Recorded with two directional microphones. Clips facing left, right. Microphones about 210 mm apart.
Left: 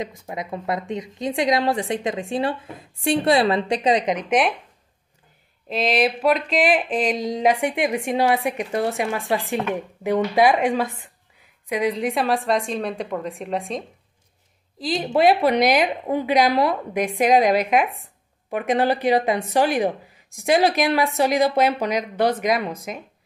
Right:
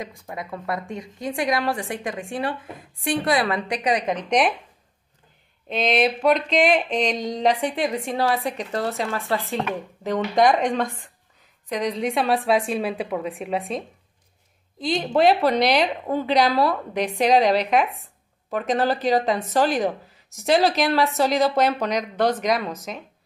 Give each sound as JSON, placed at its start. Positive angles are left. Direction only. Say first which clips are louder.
{"t": 0.0, "sound": "a woman's voice", "louder": "left 3 dB", "side_deg": 20}
{"t": 4.3, "sound": "a woman's voice", "louder": "even", "side_deg": 0}
{"t": 5.7, "sound": "a woman's voice", "louder": "even", "side_deg": 0}